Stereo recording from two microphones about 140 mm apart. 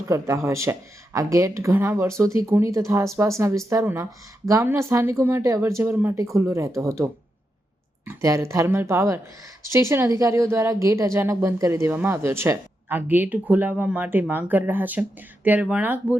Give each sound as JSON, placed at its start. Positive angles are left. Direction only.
{"t": 0.1, "sound": "speech", "side_deg": -20}